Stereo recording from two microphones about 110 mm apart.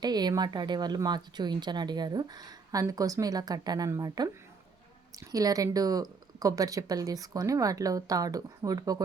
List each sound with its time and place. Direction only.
0.0 s speech: 40° right (ahead or behind)